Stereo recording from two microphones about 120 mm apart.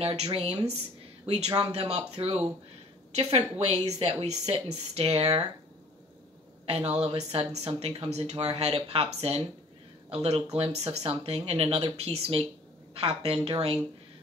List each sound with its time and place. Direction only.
0.0 s speech: 55° right (ahead or behind)
1.2 s speech: 60° right (ahead or behind)
6.6 s a woman's voice: 60° right (ahead or behind)